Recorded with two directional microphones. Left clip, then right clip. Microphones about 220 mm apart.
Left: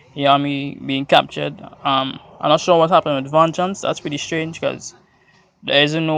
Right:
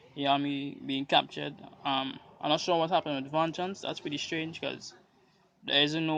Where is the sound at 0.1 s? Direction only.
20° left (ahead or behind).